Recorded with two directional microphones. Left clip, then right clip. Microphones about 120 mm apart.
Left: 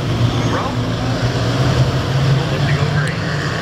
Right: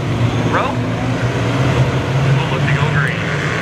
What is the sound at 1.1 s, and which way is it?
Vehicle, centre (ahead or behind).